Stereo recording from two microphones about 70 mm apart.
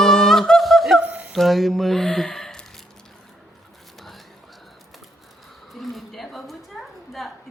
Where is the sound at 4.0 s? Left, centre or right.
Centre.